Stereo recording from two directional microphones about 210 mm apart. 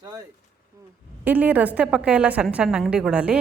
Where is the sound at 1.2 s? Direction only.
10° right (ahead or behind).